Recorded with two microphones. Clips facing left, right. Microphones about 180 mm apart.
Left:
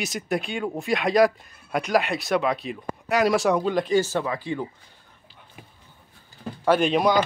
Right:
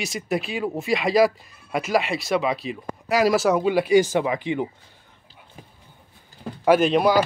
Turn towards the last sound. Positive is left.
turn(degrees=-5)  # may be behind; listen again after turning